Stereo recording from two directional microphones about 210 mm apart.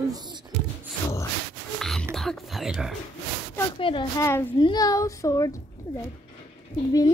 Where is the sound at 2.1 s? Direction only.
Centre (ahead or behind).